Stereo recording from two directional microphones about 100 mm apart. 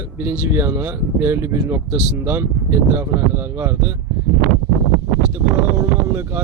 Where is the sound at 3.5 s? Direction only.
25° right (ahead or behind).